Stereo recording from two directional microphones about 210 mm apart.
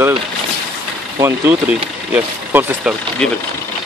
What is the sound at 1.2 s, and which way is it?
Speech, 10° right (ahead or behind).